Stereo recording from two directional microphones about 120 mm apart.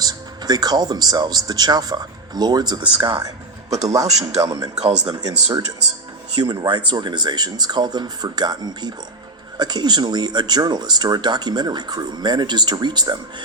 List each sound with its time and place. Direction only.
0.0 s speech: 35° right (ahead or behind)
4.0 s speech: 65° right (ahead or behind)
4.4 s speech: 30° right (ahead or behind)
4.8 s speech: 70° right (ahead or behind)
5.0 s speech: 35° right (ahead or behind)